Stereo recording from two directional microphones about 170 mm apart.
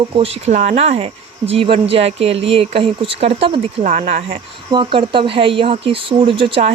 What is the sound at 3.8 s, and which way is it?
Speech, 45° right (ahead or behind).